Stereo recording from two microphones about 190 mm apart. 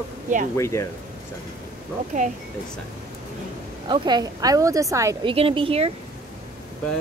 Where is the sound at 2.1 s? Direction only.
40° right (ahead or behind).